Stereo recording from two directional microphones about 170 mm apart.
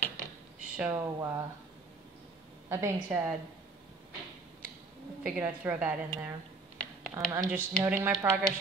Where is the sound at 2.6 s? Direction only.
15° right (ahead or behind).